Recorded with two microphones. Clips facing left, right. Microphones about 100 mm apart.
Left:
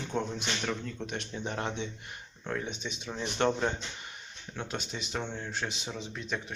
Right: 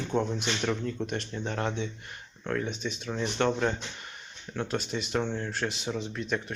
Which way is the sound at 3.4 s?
30° left (ahead or behind).